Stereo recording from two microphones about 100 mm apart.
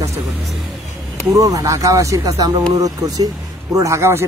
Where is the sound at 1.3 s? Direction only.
35° right (ahead or behind).